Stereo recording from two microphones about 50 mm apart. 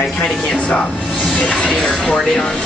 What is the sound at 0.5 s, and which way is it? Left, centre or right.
Speech, left.